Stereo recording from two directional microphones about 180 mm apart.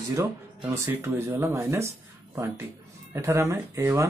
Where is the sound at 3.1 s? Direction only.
15° right (ahead or behind).